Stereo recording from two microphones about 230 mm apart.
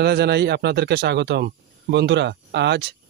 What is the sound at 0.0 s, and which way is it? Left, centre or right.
Speech, right.